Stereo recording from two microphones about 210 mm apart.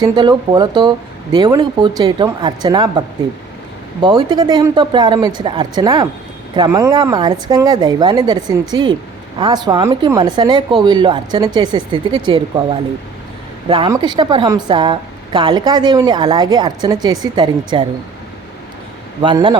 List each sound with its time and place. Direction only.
0.0 s a woman's voice: 20° right (ahead or behind)
4.0 s a woman's voice: 20° right (ahead or behind)
13.7 s a woman's voice: 25° right (ahead or behind)
19.2 s a woman's voice: 20° right (ahead or behind)